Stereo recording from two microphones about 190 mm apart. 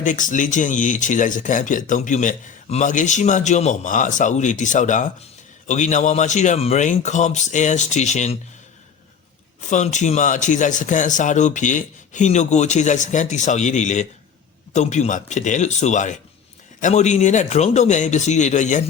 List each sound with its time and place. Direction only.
0.0 s speech: 40° left (ahead or behind)
9.6 s speech: 40° left (ahead or behind)